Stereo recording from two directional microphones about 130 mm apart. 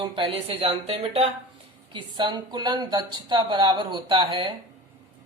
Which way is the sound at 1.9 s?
35° right (ahead or behind).